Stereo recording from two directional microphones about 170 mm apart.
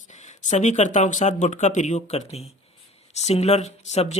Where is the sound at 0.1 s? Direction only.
45° left (ahead or behind).